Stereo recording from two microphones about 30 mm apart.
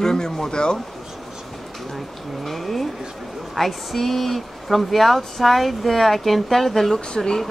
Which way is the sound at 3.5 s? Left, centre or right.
Centre.